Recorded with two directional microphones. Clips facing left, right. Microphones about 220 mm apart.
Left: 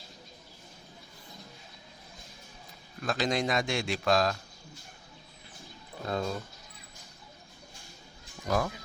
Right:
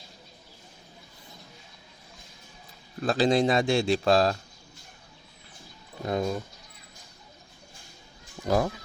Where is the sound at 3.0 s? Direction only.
30° right (ahead or behind).